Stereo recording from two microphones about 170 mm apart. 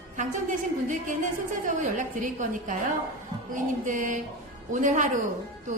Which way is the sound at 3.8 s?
50° right (ahead or behind).